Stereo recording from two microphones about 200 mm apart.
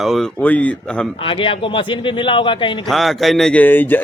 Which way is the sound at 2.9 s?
Centre (ahead or behind).